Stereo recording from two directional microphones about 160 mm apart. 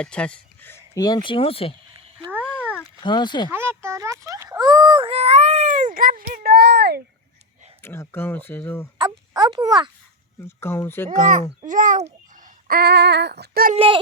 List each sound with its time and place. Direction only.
0.0 s speech: 5° left (ahead or behind)
0.9 s speech: 25° left (ahead or behind)
3.0 s speech: 30° left (ahead or behind)
3.5 s a sound: 15° right (ahead or behind); by 7.0 s 90° right
7.8 s speech: 15° left (ahead or behind)
9.0 s speech: 25° right (ahead or behind)
10.4 s speech: 15° left (ahead or behind)
11.6 s a child's voice: 55° right (ahead or behind)
12.6 s female singing: 75° right (ahead or behind)
13.7 s speech: 30° right (ahead or behind)